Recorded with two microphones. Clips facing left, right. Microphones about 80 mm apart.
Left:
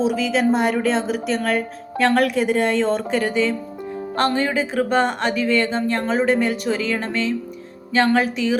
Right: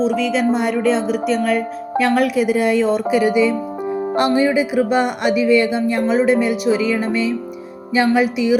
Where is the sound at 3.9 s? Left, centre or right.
Right.